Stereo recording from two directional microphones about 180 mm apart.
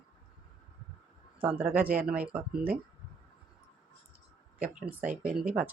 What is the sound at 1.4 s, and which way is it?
Speech, 10° right (ahead or behind).